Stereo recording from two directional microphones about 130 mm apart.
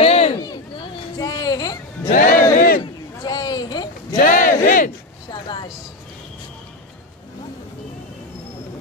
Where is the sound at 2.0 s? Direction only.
90° left.